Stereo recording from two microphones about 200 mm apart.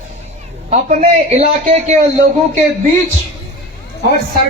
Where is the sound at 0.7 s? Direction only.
35° right (ahead or behind).